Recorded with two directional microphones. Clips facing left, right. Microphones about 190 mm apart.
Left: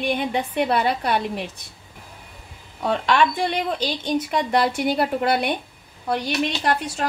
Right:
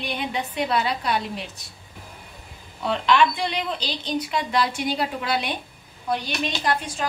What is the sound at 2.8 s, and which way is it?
Speech, 50° left (ahead or behind).